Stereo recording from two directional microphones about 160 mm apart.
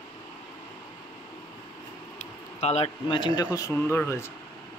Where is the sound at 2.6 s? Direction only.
45° left (ahead or behind); by 4.2 s 15° left (ahead or behind).